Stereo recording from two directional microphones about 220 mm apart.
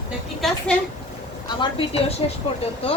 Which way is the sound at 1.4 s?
20° left (ahead or behind).